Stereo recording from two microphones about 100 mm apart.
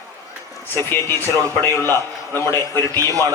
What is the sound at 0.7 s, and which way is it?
A man's voice, 25° left (ahead or behind).